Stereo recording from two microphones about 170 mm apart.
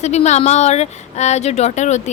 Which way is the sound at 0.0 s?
40° left (ahead or behind).